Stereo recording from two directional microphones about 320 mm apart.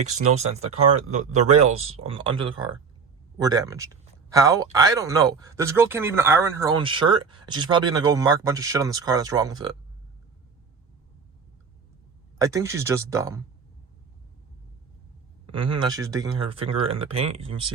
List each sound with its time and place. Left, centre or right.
0.3 s speech: centre
12.4 s speech: centre
15.5 s speech: centre